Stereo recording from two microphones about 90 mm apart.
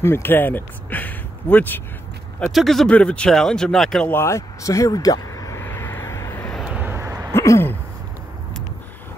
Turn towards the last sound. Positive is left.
turn(degrees=30)  # may be behind; listen again after turning